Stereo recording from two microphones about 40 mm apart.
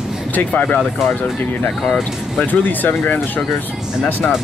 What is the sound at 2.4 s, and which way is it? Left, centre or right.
Speech, left.